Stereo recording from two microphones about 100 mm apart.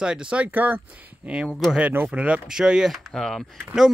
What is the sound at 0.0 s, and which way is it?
Speech, 10° right (ahead or behind).